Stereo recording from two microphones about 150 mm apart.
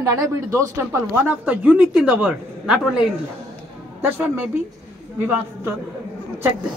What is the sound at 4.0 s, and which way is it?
Speech, 15° right (ahead or behind).